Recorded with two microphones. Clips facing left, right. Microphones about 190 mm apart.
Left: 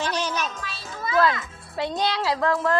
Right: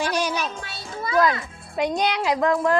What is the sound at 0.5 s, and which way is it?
Music, 30° right (ahead or behind).